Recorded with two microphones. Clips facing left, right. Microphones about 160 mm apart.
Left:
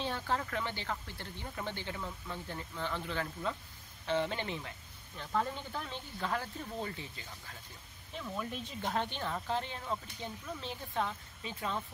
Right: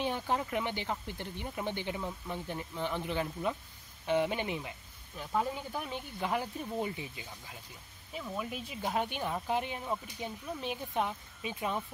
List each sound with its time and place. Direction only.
0.0 s speech: 15° right (ahead or behind)